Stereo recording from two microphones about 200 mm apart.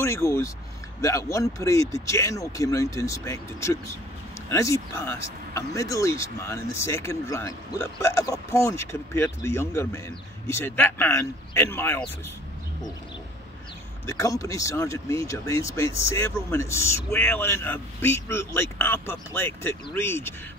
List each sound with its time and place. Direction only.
0.0 s speech: 15° left (ahead or behind)
14.0 s speech: 15° left (ahead or behind)